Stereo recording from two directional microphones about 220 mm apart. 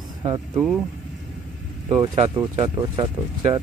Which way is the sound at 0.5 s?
Centre (ahead or behind).